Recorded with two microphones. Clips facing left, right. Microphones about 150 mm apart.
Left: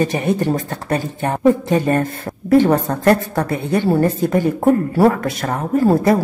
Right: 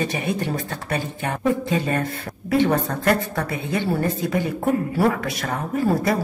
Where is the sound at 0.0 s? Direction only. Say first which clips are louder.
Left 7 dB; 45° left (ahead or behind).